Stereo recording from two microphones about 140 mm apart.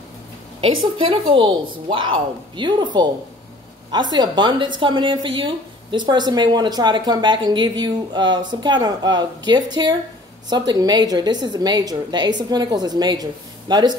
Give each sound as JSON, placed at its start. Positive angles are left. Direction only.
{"t": 0.6, "sound": "a woman's voice", "side_deg": -40}